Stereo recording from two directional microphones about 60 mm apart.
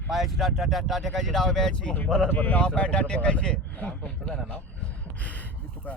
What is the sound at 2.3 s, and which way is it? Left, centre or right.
Speech, left.